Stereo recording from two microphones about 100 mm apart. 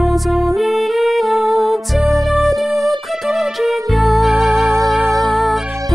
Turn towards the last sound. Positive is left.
turn(degrees=0)  # may be behind; listen again after turning